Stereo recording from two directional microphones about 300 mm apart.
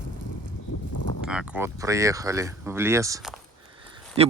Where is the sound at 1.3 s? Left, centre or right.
Centre.